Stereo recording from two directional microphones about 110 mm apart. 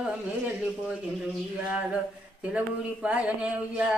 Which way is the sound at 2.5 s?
10° right (ahead or behind).